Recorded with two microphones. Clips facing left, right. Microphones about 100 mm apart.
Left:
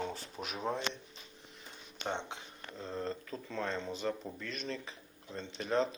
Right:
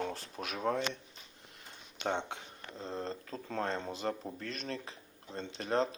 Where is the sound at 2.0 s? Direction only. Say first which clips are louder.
Right 3 dB; 60° right (ahead or behind).